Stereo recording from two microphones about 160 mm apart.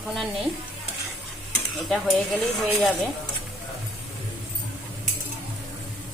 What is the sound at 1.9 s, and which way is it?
Speech, 5° left (ahead or behind).